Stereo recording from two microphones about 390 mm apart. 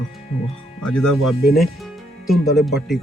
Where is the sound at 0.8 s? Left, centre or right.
Centre.